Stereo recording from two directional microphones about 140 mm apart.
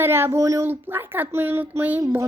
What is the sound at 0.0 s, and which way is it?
Speech, 15° right (ahead or behind).